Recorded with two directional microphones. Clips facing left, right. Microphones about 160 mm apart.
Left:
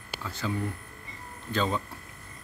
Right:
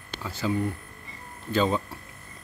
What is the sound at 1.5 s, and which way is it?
Speech, 10° right (ahead or behind).